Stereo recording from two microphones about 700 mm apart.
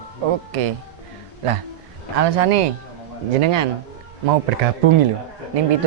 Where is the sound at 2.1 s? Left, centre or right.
Right.